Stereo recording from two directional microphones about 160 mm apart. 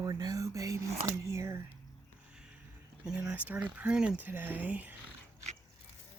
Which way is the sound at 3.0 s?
5° right (ahead or behind).